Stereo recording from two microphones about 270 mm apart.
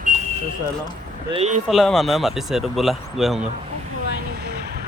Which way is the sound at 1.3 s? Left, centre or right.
Right.